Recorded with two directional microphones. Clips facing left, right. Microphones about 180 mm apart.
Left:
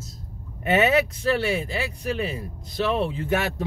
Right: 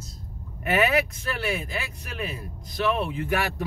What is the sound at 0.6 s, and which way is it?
Speech, 25° left (ahead or behind).